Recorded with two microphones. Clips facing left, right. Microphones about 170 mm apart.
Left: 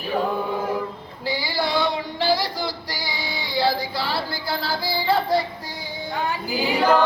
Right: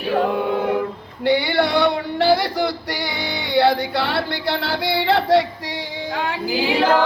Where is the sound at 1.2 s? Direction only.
65° right (ahead or behind); by 5.5 s 85° right.